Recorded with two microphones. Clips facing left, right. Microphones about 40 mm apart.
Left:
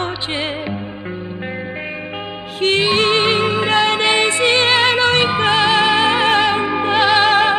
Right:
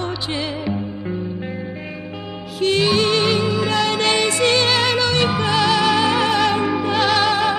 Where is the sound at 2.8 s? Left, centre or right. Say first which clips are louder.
Left 2 dB; left.